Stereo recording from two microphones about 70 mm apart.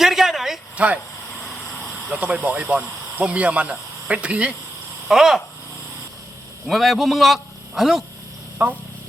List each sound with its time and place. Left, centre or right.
0.0 s a sound: centre
2.2 s speech: right
5.0 s a man's voice: centre
6.7 s a man's voice: centre
8.6 s speech: right